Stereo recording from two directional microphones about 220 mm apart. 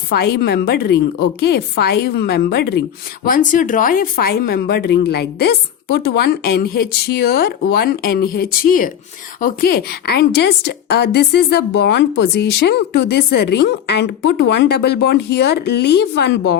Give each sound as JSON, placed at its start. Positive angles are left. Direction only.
{"t": 0.1, "sound": "a woman's voice", "side_deg": 45}